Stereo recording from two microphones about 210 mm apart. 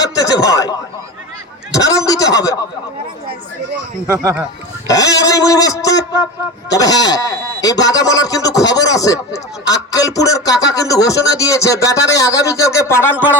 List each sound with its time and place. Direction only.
0.2 s a man's voice: 15° left (ahead or behind)
4.0 s speech: 15° right (ahead or behind)
4.9 s speech: 15° left (ahead or behind)